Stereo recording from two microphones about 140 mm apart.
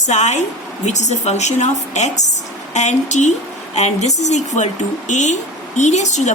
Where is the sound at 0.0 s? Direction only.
55° left (ahead or behind).